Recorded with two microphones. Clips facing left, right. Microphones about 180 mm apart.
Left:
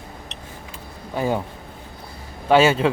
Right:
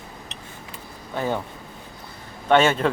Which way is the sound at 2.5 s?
5° left (ahead or behind).